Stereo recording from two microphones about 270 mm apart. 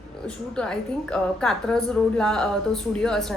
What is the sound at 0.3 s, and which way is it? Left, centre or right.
A woman's voice, centre.